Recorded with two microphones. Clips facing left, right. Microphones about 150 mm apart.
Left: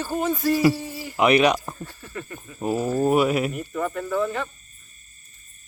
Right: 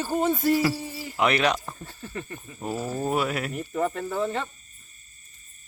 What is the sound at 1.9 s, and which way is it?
Speech, 25° right (ahead or behind).